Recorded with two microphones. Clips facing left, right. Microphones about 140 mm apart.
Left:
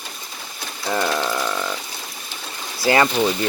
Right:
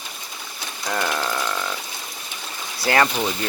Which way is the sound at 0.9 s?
10° left (ahead or behind).